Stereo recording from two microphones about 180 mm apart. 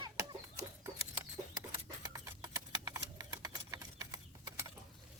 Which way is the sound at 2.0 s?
20° right (ahead or behind).